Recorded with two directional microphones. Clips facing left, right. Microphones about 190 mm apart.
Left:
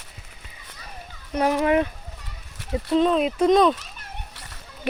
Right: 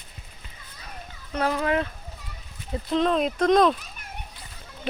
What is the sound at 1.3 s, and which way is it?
Speech, 15° left (ahead or behind).